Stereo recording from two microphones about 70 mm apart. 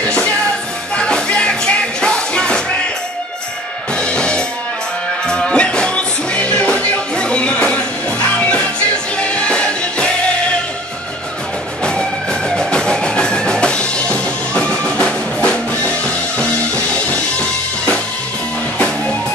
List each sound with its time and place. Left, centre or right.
0.9 s music: centre
3.9 s music: centre
11.8 s music: centre